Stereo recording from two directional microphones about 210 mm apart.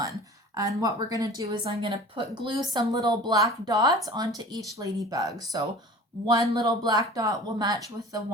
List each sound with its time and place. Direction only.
0.0 s a woman's voice: 15° right (ahead or behind)